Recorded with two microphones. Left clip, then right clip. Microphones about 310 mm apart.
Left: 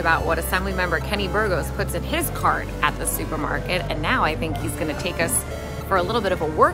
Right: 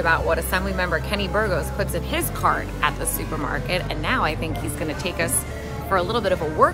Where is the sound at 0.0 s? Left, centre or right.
Centre.